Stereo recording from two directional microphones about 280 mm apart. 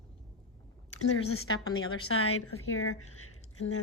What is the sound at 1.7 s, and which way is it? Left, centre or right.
A woman's voice, left.